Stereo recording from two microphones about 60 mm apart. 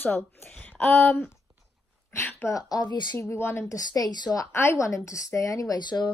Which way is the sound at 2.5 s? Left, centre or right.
Left.